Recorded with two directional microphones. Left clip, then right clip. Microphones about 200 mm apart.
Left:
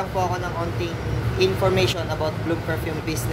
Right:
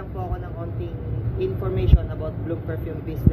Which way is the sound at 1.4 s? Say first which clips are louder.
Left 7 dB; 15° left (ahead or behind).